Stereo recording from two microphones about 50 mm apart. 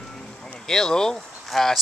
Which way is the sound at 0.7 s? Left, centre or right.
Centre.